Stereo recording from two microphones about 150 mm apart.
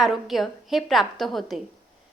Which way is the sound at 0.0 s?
Centre (ahead or behind).